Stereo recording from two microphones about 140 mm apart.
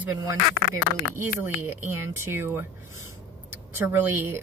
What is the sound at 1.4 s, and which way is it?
Speech, 15° right (ahead or behind).